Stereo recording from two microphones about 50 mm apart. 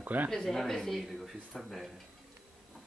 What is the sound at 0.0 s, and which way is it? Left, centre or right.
Speech, right.